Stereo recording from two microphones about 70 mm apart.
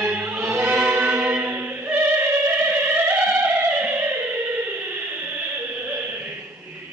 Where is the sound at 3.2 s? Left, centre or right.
Right.